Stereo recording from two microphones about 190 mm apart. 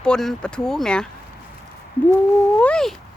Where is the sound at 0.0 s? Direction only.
5° left (ahead or behind).